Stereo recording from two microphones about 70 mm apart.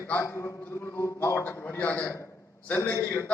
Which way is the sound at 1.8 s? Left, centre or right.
Left.